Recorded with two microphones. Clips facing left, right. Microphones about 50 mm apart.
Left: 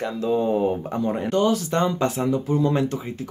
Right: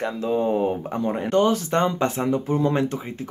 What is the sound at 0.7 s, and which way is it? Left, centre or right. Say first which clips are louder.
Speech: left 1 dB; centre.